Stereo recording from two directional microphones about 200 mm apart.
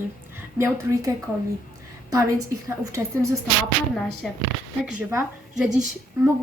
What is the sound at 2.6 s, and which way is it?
Speech, 15° right (ahead or behind).